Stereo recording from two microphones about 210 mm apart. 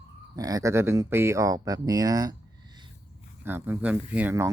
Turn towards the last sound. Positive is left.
turn(degrees=-10)  # may be behind; listen again after turning